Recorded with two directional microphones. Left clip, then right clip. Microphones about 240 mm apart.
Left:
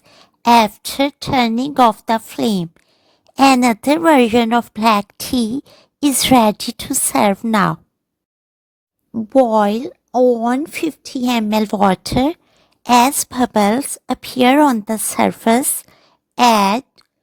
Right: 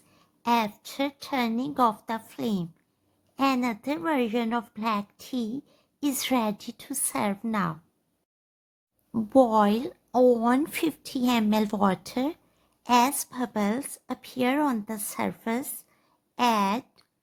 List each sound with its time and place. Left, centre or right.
0.1 s a woman's voice: left
9.1 s a woman's voice: left